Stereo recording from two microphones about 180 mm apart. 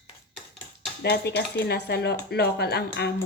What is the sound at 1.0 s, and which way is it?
Speech, 65° left (ahead or behind).